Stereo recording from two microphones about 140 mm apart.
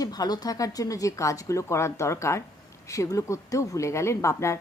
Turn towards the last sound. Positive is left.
turn(degrees=20)  # may be behind; listen again after turning